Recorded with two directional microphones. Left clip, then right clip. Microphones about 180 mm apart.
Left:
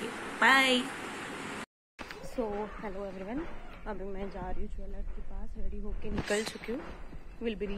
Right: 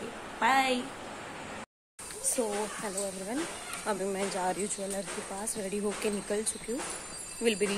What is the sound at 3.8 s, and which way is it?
Speech, 5° right (ahead or behind).